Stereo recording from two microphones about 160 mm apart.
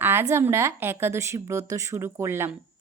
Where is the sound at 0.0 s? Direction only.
15° right (ahead or behind).